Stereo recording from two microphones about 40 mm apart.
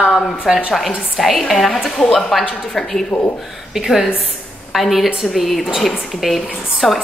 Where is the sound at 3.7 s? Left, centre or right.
Centre.